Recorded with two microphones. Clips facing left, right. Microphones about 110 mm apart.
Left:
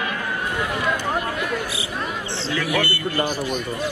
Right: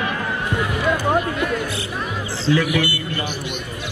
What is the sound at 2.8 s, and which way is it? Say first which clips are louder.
Speech: left 2 dB; 40° left (ahead or behind).